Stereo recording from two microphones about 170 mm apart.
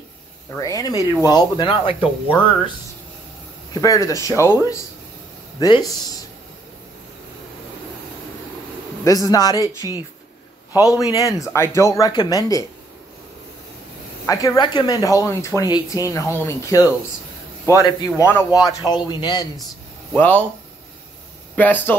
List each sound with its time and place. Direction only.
0.6 s speech: 20° left (ahead or behind)
0.9 s speech: 20° right (ahead or behind)
1.3 s speech: 25° left (ahead or behind)
3.7 s speech: 20° left (ahead or behind)
9.0 s speech: 20° left (ahead or behind)
9.6 s speech: 20° right (ahead or behind)
10.8 s speech: 20° left (ahead or behind)
14.2 s speech: 20° left (ahead or behind)
20.1 s speech: 10° left (ahead or behind)
21.5 s speech: 10° left (ahead or behind)